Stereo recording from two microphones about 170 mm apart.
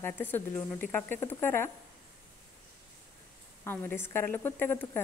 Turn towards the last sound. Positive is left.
turn(degrees=10)  # may be behind; listen again after turning